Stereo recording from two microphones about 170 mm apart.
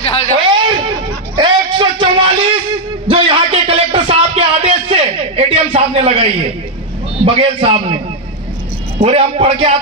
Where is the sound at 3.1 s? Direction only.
30° right (ahead or behind).